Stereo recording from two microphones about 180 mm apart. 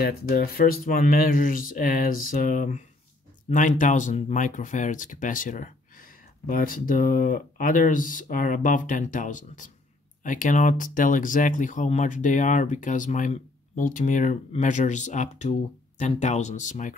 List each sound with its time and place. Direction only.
0.0 s speech: 60° left (ahead or behind); by 16.9 s 45° left (ahead or behind)